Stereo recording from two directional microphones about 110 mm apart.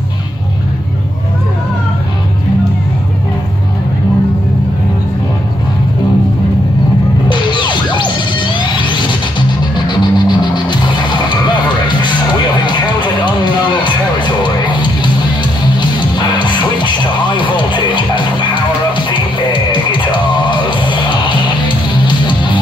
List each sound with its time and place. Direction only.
7.2 s music: 45° left (ahead or behind)
12.6 s music: 45° left (ahead or behind)